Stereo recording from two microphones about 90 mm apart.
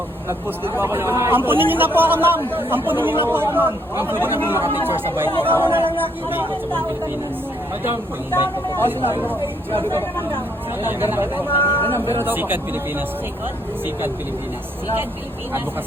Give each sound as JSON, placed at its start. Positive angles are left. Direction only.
{"t": 0.3, "sound": "speech", "side_deg": -25}
{"t": 8.8, "sound": "speech", "side_deg": -25}
{"t": 11.8, "sound": "speech", "side_deg": 20}
{"t": 12.1, "sound": "speech", "side_deg": -25}